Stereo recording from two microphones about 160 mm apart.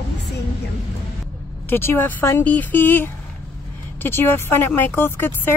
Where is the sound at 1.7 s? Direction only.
15° left (ahead or behind).